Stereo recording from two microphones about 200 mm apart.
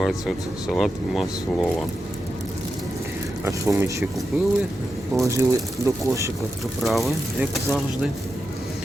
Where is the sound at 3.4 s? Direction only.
15° right (ahead or behind).